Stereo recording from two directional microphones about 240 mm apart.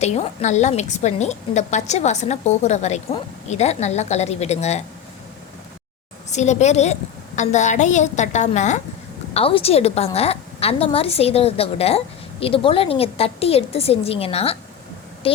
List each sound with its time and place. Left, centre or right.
0.0 s a woman's voice: left
6.3 s a woman's voice: left